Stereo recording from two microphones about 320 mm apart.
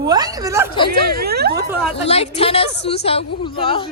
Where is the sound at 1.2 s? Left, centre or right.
Right.